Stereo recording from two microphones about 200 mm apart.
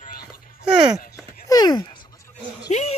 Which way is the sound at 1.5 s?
20° left (ahead or behind).